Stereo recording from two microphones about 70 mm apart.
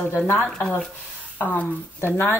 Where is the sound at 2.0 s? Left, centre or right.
Left.